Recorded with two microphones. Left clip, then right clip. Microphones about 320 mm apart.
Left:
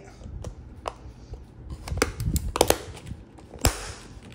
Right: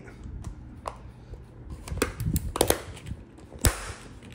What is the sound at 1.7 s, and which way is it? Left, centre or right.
Computer keyboard, centre.